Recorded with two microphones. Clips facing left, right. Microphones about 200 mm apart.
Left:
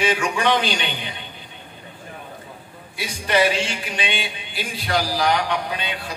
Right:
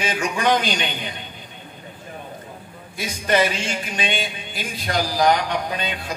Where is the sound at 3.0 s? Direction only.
45° right (ahead or behind).